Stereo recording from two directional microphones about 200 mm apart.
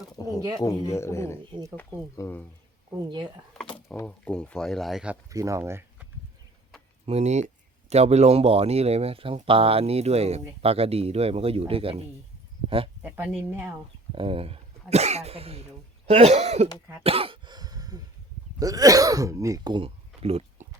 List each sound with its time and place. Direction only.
0.2 s speech: 20° left (ahead or behind)
3.9 s speech: 5° left (ahead or behind)
5.3 s speech: 15° right (ahead or behind)
7.0 s speech: 35° right (ahead or behind)
13.0 s speech: 10° right (ahead or behind)
14.2 s speech: 30° right (ahead or behind)
17.0 s throat clearing: 30° right (ahead or behind)
18.6 s speech: 15° right (ahead or behind)